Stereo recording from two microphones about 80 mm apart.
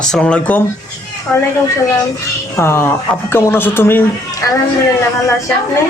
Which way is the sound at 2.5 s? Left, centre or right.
Left.